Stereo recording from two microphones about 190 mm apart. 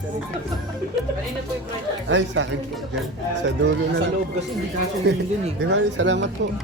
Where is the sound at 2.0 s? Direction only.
75° right (ahead or behind).